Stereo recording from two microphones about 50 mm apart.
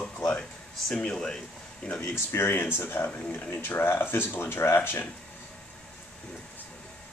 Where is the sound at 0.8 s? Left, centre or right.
Centre.